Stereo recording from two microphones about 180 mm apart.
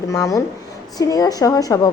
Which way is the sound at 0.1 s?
15° left (ahead or behind).